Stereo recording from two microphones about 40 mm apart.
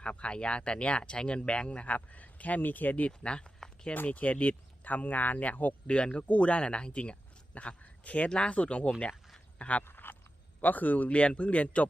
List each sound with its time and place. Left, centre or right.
0.0 s speech: left
3.1 s speech: left
4.0 s speech: left
5.9 s a man's voice: left
9.8 s a sound: left
10.6 s speech: left
11.2 s speech: left